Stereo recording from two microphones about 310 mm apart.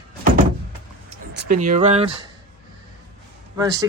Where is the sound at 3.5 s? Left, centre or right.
Centre.